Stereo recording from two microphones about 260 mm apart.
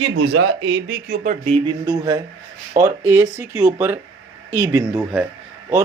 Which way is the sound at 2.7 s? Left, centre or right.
Right.